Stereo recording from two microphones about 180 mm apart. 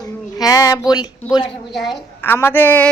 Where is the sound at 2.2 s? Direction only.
10° left (ahead or behind).